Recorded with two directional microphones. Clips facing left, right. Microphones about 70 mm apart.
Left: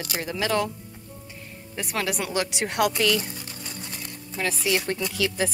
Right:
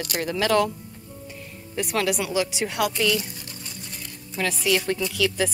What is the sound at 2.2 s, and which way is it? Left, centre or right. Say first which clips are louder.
Speech: right 2 dB; left.